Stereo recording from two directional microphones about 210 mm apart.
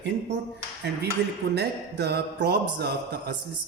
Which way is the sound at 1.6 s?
50° right (ahead or behind).